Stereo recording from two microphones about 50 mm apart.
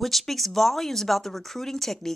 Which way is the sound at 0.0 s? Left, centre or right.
Centre.